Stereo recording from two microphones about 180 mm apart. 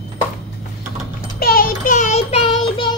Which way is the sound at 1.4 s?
55° left (ahead or behind).